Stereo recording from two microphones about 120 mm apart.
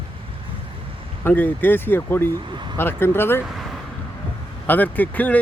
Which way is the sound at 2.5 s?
40° right (ahead or behind).